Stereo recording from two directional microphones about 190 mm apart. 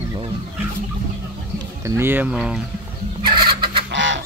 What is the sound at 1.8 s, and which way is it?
Speech, 10° right (ahead or behind).